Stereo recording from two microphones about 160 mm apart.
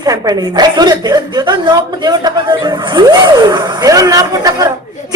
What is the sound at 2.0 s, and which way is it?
A woman's voice, 25° right (ahead or behind).